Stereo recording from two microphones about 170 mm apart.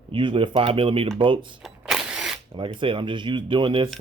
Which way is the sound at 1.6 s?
5° right (ahead or behind).